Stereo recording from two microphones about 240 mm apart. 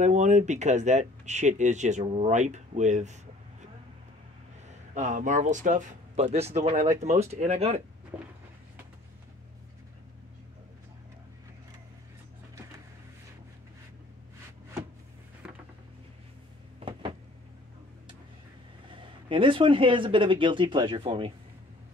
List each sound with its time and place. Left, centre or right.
0.0 s speech: right
4.6 s speech: right
8.1 s a sound: centre
15.4 s music: centre
18.9 s speech: right